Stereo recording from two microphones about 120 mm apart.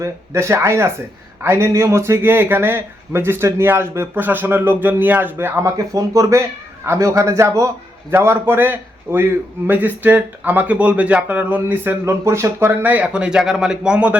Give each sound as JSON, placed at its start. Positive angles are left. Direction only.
{"t": 0.0, "sound": "a man's voice", "side_deg": -20}